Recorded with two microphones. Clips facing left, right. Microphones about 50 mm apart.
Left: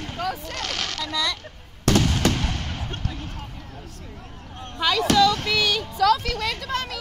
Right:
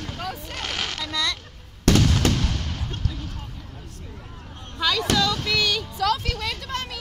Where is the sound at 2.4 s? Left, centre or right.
Left.